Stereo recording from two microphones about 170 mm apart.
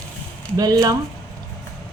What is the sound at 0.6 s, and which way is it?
Speech, 20° right (ahead or behind).